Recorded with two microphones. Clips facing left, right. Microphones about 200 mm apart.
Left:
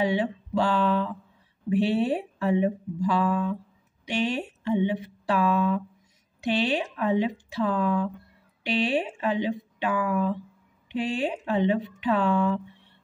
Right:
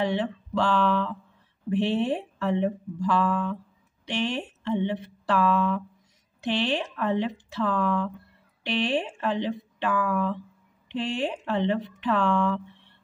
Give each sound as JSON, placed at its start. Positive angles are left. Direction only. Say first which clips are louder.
{"t": 0.0, "sound": "speech", "louder": "left 1 dB", "side_deg": 10}